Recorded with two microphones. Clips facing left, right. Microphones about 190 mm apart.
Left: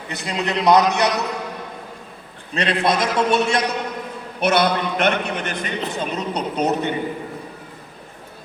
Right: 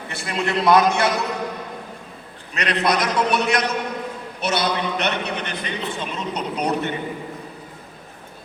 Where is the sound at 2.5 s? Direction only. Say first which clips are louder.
Left 1 dB; 30° left (ahead or behind).